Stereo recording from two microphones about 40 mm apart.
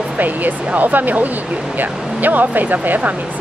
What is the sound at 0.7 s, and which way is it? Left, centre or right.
Speech, right.